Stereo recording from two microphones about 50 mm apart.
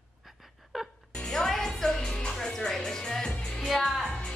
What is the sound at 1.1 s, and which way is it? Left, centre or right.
Music, centre.